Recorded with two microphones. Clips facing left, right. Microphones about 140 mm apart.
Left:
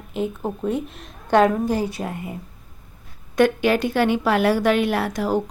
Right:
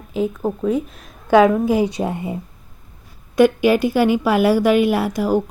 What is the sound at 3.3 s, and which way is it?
A woman's voice, 5° right (ahead or behind).